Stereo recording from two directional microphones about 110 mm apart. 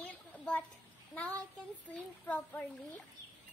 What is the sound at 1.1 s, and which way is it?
Child singing, 10° left (ahead or behind).